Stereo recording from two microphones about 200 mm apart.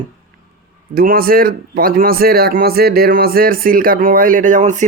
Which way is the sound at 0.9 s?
50° right (ahead or behind).